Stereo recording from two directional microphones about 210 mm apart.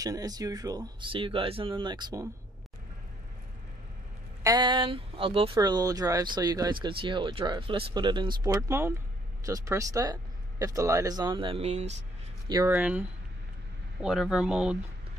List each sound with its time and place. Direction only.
0.0 s speech: 15° right (ahead or behind)
4.4 s speech: 20° right (ahead or behind)
12.4 s speech: 15° right (ahead or behind)
14.0 s speech: centre (ahead or behind)